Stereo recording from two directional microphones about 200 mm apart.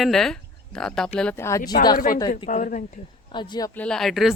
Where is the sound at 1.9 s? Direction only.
45° left (ahead or behind).